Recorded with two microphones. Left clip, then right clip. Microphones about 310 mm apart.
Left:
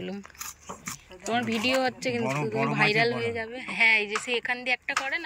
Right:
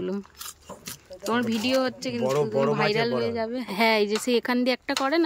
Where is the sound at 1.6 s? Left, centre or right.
Centre.